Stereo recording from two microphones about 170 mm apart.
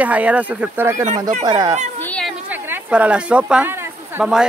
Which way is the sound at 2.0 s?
5° left (ahead or behind).